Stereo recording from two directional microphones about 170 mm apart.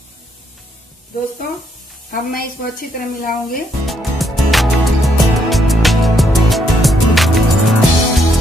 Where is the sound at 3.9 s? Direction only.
Centre (ahead or behind).